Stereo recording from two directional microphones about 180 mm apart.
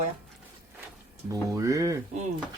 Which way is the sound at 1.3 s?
15° right (ahead or behind).